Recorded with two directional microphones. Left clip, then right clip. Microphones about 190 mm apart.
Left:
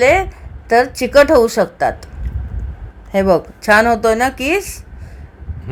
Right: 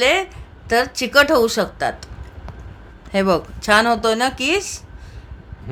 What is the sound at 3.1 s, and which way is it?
A woman's voice, 5° left (ahead or behind).